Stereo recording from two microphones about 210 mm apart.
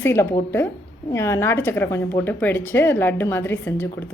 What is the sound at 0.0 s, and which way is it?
A woman's voice, 10° left (ahead or behind).